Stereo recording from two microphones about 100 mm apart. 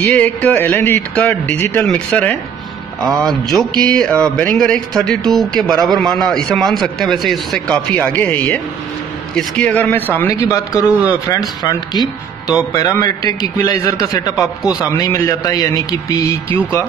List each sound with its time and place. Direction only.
0.0 s speech: 15° left (ahead or behind)
3.2 s a sound: 5° left (ahead or behind)
4.2 s speech: 15° left (ahead or behind)
5.3 s a sound: 5° left (ahead or behind)
5.9 s speech: 5° left (ahead or behind)
10.5 s speech: 35° left (ahead or behind)
14.6 s a man's voice: 10° right (ahead or behind)
14.9 s speech: 35° left (ahead or behind)